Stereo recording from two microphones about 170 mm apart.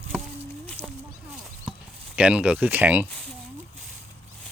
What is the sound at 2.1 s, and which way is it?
Speech, 5° right (ahead or behind).